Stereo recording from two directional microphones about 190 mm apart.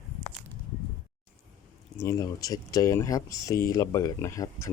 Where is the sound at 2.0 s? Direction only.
15° left (ahead or behind).